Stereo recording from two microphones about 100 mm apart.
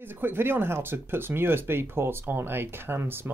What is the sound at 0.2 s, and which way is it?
Speech, 20° right (ahead or behind).